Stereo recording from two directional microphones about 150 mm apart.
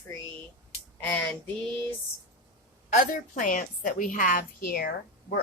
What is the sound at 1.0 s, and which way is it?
Female singing, 15° left (ahead or behind).